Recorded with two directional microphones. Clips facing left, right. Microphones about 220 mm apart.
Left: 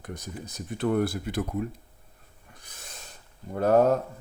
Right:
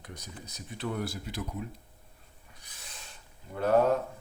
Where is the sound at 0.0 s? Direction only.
50° left (ahead or behind).